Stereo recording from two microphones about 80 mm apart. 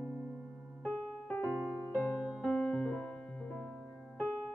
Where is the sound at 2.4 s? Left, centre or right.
Centre.